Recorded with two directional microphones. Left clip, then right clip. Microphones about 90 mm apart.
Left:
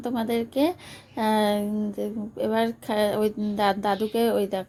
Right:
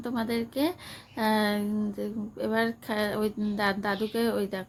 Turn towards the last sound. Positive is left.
turn(degrees=35)  # may be behind; listen again after turning